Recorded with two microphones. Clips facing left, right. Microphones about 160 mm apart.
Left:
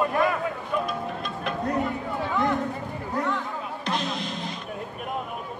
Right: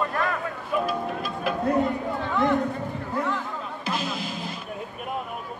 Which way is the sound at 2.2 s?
5° left (ahead or behind).